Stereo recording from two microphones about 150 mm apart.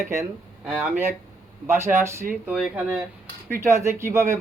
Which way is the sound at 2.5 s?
5° right (ahead or behind).